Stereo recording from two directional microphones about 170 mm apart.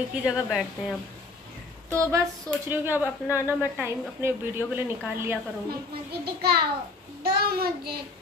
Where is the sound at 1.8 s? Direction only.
20° right (ahead or behind).